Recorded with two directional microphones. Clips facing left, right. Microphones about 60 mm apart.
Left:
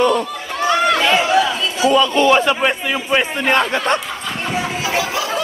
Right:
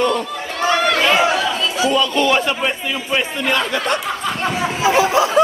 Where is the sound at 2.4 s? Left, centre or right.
Left.